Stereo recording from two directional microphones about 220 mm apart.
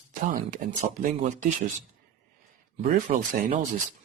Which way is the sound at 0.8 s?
35° right (ahead or behind).